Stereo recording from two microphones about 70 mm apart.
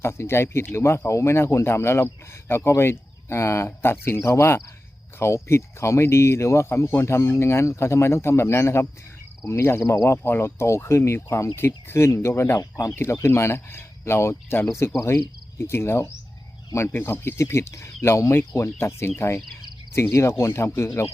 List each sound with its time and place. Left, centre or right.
0.0 s speech: left
12.5 s speech: left
13.2 s speech: left